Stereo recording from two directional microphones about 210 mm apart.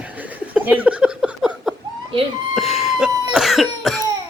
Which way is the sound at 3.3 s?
Centre (ahead or behind).